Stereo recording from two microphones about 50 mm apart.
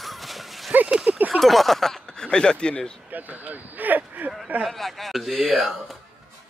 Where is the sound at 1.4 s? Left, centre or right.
Centre.